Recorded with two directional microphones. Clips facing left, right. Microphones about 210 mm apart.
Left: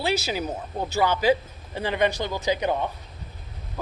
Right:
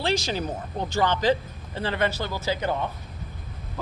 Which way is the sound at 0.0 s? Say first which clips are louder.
Even; 10° left (ahead or behind).